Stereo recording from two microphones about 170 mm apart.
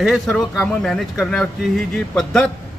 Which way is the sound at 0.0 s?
Centre (ahead or behind).